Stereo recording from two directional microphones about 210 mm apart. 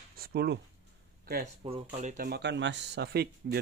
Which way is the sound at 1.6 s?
30° right (ahead or behind).